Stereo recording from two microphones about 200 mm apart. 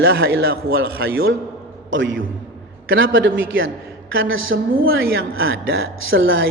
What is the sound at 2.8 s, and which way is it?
A man's voice, 75° right (ahead or behind).